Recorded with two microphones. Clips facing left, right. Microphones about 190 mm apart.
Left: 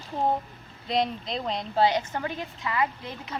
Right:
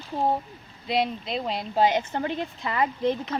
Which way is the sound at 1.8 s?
25° right (ahead or behind).